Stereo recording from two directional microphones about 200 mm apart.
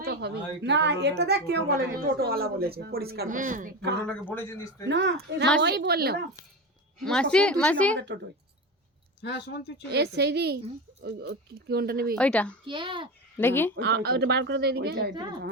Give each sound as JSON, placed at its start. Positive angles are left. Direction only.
{"t": 0.0, "sound": "a woman's voice", "side_deg": -55}
{"t": 4.0, "sound": "a man's voice", "side_deg": 5}
{"t": 4.9, "sound": "a woman's voice", "side_deg": -60}
{"t": 7.0, "sound": "speech", "side_deg": 5}
{"t": 7.9, "sound": "speech", "side_deg": -60}
{"t": 9.2, "sound": "speech", "side_deg": 55}
{"t": 9.9, "sound": "a woman's voice", "side_deg": -55}
{"t": 12.1, "sound": "speech", "side_deg": 5}
{"t": 12.6, "sound": "a child's voice", "side_deg": -25}
{"t": 13.3, "sound": "a man's voice", "side_deg": 10}
{"t": 13.7, "sound": "speech", "side_deg": -55}
{"t": 15.1, "sound": "a child's voice", "side_deg": -20}